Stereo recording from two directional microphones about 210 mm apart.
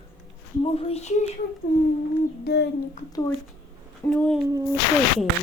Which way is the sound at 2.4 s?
50° left (ahead or behind).